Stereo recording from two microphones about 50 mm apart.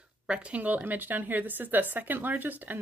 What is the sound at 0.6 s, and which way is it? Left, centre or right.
Speech, right.